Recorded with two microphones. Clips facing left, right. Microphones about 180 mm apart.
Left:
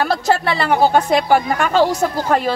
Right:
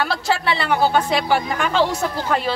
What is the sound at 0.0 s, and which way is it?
Speech, 45° left (ahead or behind).